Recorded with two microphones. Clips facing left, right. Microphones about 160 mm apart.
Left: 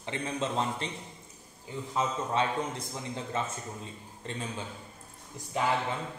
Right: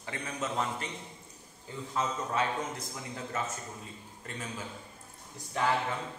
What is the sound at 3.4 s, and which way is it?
A man's voice, 25° left (ahead or behind).